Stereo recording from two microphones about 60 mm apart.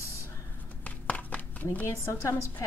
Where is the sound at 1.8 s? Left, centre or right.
Left.